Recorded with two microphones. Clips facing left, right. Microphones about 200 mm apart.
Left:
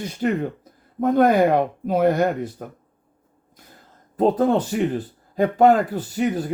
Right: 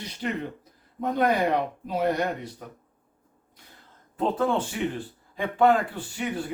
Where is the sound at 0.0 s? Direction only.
45° left (ahead or behind).